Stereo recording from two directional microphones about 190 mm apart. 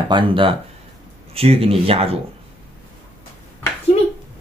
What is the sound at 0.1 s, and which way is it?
Speech, 25° right (ahead or behind).